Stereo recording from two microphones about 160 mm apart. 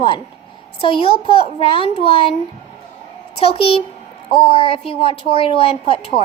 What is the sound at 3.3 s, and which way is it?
A child's voice, 40° left (ahead or behind).